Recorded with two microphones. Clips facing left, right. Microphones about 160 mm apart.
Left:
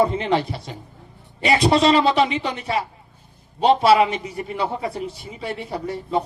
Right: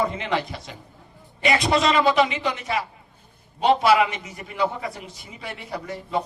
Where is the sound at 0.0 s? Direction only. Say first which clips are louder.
Left 5 dB; 30° left (ahead or behind).